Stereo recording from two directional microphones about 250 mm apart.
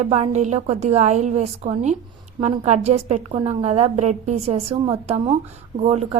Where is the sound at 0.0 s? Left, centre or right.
Right.